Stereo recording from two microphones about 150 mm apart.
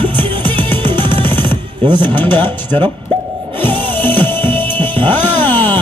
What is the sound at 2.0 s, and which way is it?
Speech, 10° left (ahead or behind).